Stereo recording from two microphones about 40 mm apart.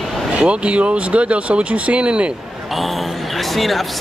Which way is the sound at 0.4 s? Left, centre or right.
Right.